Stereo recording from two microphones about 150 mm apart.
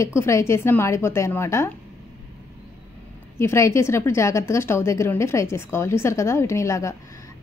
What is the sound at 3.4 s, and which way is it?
A woman's voice, 20° left (ahead or behind).